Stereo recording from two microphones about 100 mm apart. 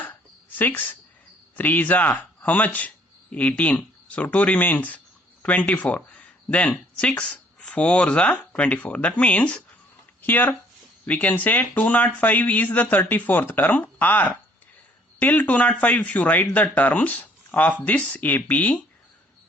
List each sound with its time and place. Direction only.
0.6 s a woman's voice: 20° left (ahead or behind)